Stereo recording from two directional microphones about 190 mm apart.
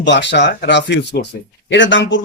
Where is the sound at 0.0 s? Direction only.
70° left (ahead or behind).